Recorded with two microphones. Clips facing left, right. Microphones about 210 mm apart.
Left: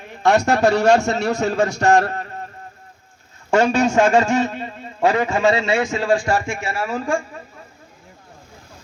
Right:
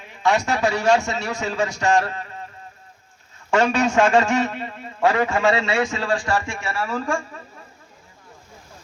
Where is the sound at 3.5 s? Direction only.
25° left (ahead or behind).